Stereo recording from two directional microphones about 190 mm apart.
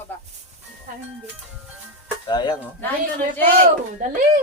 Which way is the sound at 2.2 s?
20° left (ahead or behind).